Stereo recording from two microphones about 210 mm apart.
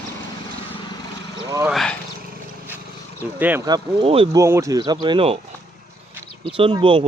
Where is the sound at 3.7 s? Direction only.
25° right (ahead or behind).